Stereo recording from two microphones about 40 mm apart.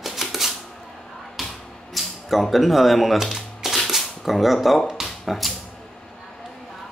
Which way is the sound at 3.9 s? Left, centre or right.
Centre.